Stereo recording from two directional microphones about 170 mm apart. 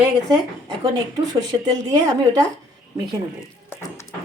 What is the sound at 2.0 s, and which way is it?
Speech, 20° right (ahead or behind).